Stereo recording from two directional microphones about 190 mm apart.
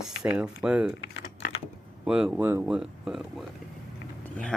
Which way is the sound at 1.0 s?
65° left (ahead or behind).